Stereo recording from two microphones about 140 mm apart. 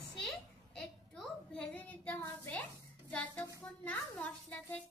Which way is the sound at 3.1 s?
10° left (ahead or behind).